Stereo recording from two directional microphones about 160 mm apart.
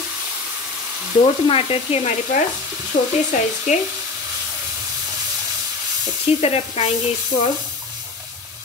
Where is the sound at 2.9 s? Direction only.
75° left (ahead or behind).